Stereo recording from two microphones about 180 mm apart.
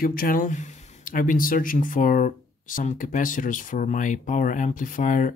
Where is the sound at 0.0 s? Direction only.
50° left (ahead or behind).